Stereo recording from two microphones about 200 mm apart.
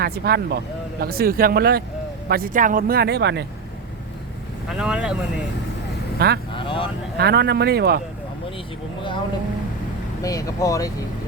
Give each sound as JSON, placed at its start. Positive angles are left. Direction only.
{"t": 0.0, "sound": "speech", "side_deg": -50}
{"t": 4.7, "sound": "speech", "side_deg": -5}
{"t": 6.1, "sound": "speech", "side_deg": -55}
{"t": 6.5, "sound": "vehicle", "side_deg": 25}
{"t": 7.2, "sound": "speech", "side_deg": -55}
{"t": 10.2, "sound": "speech", "side_deg": 15}